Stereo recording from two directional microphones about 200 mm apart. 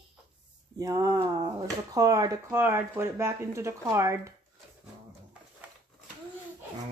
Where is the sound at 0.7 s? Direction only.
15° right (ahead or behind).